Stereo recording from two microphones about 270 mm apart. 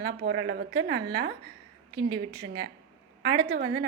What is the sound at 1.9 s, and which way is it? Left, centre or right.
Speech, centre.